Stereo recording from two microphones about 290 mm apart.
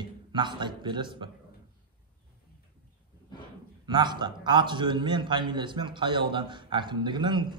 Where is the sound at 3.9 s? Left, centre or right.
Centre.